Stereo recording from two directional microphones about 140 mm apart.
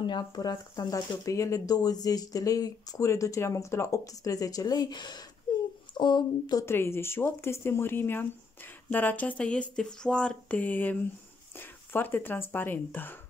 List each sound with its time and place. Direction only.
0.0 s speech: 30° left (ahead or behind)
5.5 s a sound: 35° left (ahead or behind)
5.9 s speech: 30° left (ahead or behind); by 13.2 s 15° left (ahead or behind)